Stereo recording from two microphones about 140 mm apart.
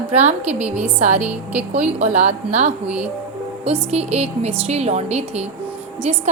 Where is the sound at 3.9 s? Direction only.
50° right (ahead or behind).